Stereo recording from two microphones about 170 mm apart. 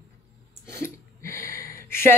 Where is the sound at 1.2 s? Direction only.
15° left (ahead or behind).